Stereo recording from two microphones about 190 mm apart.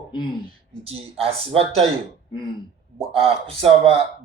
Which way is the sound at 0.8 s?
30° right (ahead or behind).